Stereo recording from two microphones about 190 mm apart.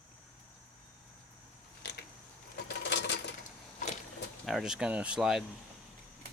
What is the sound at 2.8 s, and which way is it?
Sewing machine, 65° left (ahead or behind).